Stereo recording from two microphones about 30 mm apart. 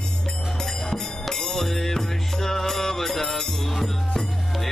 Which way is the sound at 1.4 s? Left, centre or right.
Centre.